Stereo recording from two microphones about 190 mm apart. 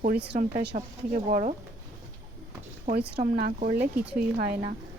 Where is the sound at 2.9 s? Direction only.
50° right (ahead or behind).